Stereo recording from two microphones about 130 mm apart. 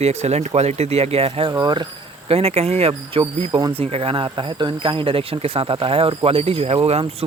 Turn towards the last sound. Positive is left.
turn(degrees=-50)  # may be behind; listen again after turning